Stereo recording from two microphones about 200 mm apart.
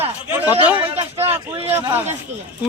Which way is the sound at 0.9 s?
30° right (ahead or behind).